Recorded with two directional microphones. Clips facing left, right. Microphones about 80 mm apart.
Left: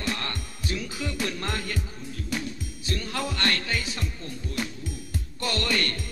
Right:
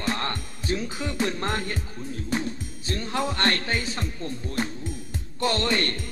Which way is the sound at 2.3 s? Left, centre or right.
Right.